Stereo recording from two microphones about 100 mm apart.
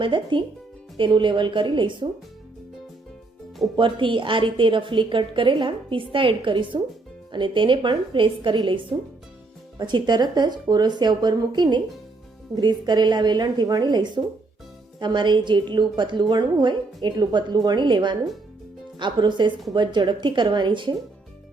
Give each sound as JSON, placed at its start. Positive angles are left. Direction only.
{"t": 0.0, "sound": "a woman's voice", "side_deg": -55}
{"t": 3.8, "sound": "a woman's voice", "side_deg": -55}